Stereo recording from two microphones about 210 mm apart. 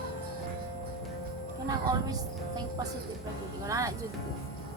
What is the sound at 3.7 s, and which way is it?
Speech, 15° right (ahead or behind).